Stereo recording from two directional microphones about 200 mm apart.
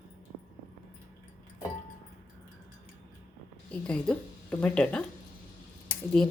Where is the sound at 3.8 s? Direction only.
5° left (ahead or behind).